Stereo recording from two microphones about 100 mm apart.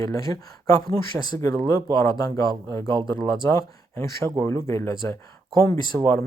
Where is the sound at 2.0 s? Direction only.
35° left (ahead or behind).